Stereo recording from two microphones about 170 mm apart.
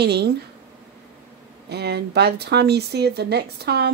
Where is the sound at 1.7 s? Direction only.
75° right (ahead or behind).